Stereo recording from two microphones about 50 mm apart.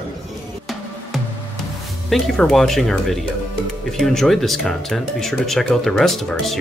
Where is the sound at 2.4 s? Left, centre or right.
Centre.